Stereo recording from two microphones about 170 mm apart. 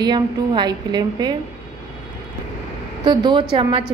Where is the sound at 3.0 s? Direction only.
25° right (ahead or behind).